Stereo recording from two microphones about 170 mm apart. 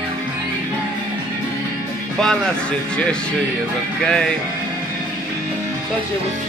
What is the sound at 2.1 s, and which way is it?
Speech, 5° left (ahead or behind).